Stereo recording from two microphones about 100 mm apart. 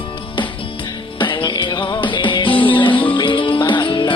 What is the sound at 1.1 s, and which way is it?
Music, 55° left (ahead or behind).